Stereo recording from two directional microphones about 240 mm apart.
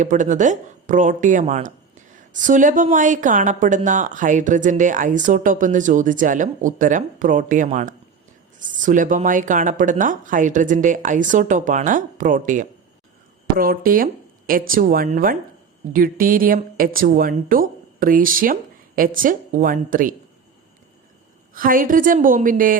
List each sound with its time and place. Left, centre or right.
0.0 s speech: right
21.5 s speech: right